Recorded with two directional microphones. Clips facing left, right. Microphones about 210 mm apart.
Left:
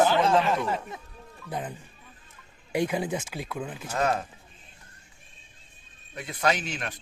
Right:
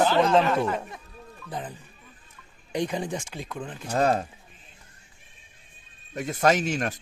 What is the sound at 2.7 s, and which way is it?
Speech, 5° left (ahead or behind).